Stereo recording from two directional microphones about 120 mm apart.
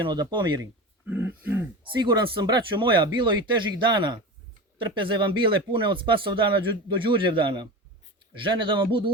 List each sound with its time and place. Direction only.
0.0 s speech: 40° right (ahead or behind)
1.0 s throat clearing: 15° right (ahead or behind)
1.8 s speech: 40° right (ahead or behind)